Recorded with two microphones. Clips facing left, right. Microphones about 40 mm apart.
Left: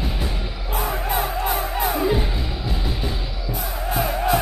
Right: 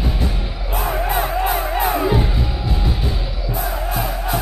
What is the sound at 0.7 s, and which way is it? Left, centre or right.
Music, centre.